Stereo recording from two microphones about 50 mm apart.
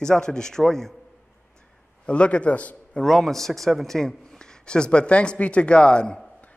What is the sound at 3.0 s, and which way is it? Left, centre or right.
Speech, centre.